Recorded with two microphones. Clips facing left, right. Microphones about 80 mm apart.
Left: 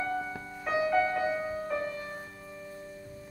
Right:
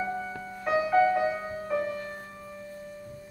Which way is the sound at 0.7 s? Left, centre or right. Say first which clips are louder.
Right 4 dB; centre.